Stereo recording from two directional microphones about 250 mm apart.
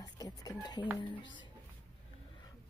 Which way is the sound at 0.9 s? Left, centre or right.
Centre.